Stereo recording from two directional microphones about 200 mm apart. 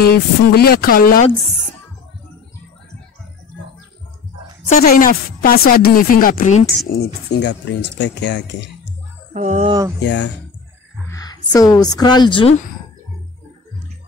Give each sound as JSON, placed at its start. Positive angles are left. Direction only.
{"t": 0.0, "sound": "speech", "side_deg": 50}
{"t": 4.8, "sound": "speech", "side_deg": 45}
{"t": 6.9, "sound": "speech", "side_deg": 55}
{"t": 9.3, "sound": "speech", "side_deg": -40}
{"t": 9.7, "sound": "speech", "side_deg": -15}
{"t": 9.9, "sound": "speech", "side_deg": 60}
{"t": 11.1, "sound": "speech", "side_deg": 20}